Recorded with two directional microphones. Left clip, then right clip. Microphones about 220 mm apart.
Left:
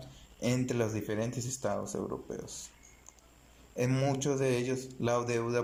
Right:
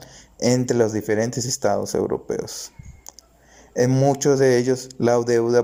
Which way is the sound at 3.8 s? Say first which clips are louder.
Right 13 dB; 30° right (ahead or behind).